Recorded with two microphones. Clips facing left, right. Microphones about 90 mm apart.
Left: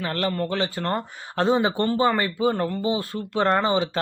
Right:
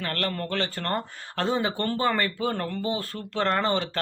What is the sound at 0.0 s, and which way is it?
Speech, 15° left (ahead or behind).